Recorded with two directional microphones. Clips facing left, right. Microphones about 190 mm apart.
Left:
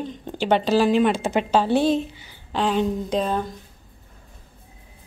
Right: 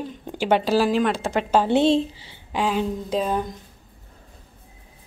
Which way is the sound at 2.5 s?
5° right (ahead or behind).